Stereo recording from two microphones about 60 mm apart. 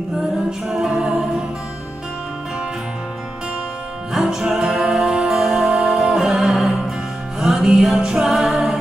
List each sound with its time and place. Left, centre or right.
0.5 s a capella: centre
4.1 s music: centre